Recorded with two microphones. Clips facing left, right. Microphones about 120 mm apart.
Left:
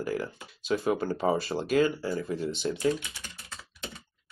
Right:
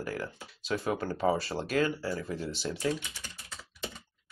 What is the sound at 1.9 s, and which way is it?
Speech, 20° left (ahead or behind).